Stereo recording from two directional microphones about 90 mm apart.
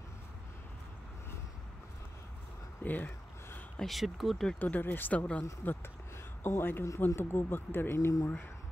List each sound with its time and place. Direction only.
2.8 s speech: 20° left (ahead or behind)
3.8 s speech: centre (ahead or behind)
4.6 s speech: 20° left (ahead or behind)